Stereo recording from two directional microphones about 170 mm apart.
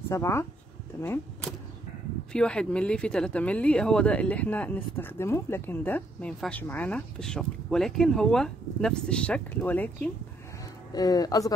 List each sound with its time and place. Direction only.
0.1 s speech: 15° left (ahead or behind)
10.9 s speech: 20° left (ahead or behind)